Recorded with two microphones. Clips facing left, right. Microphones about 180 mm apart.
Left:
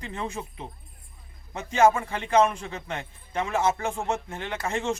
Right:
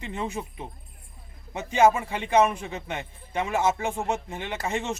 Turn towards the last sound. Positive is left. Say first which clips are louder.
# even
turn(degrees=-15)  # may be behind; listen again after turning